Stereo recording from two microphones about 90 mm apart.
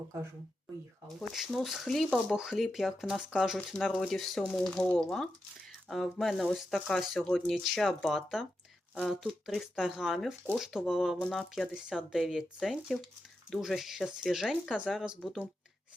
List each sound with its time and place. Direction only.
1.0 s speech: centre (ahead or behind)
7.0 s speech: 5° right (ahead or behind)
7.3 s speech: 5° left (ahead or behind)